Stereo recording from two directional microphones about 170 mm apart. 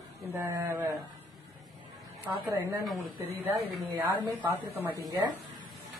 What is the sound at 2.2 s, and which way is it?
Speech, 10° right (ahead or behind).